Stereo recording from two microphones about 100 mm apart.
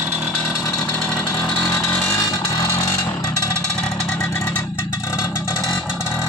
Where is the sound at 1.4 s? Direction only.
10° left (ahead or behind).